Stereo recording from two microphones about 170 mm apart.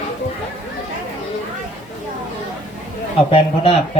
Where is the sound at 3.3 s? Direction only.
35° left (ahead or behind).